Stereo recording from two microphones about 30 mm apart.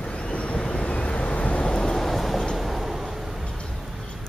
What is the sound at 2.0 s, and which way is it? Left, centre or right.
Vehicle, centre.